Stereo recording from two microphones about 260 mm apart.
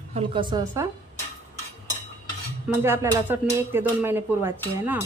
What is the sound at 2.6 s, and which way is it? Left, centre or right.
Speech, centre.